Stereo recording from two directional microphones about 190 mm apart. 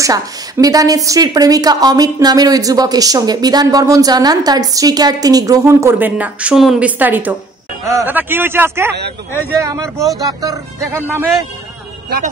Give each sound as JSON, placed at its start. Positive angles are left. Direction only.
{"t": 0.0, "sound": "a woman's voice", "side_deg": -20}